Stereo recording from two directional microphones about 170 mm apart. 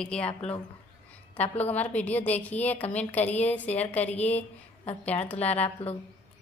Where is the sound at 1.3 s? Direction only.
10° left (ahead or behind).